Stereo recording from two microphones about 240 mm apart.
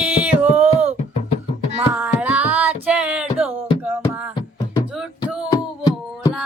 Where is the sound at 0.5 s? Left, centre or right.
Right.